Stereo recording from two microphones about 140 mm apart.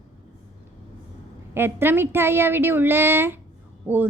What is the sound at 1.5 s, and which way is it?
A woman's voice, 15° right (ahead or behind).